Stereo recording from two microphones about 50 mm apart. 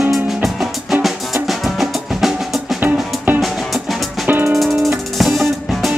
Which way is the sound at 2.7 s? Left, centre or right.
Right.